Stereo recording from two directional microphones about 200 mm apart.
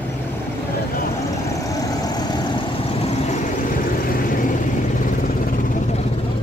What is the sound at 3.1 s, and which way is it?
Vehicle, 35° left (ahead or behind).